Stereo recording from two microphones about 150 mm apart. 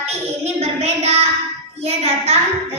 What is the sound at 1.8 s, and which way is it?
Speech, 45° right (ahead or behind).